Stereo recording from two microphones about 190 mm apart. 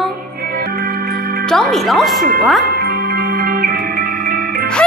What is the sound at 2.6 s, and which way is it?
Music, 55° right (ahead or behind).